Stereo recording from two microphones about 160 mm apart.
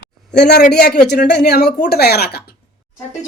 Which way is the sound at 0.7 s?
90° left.